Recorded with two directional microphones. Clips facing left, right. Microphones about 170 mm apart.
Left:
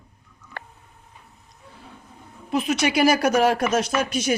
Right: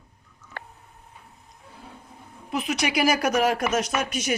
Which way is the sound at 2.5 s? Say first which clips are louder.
Left 4 dB; 30° left (ahead or behind).